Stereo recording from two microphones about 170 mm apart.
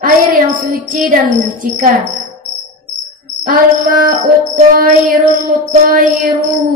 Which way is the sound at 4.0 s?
55° right (ahead or behind).